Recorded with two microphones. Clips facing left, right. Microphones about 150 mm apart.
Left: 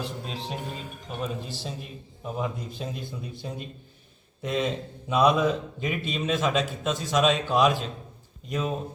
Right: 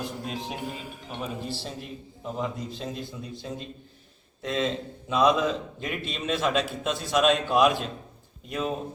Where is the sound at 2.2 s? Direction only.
5° left (ahead or behind).